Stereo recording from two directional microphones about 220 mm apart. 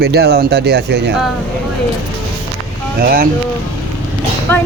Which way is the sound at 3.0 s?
40° right (ahead or behind).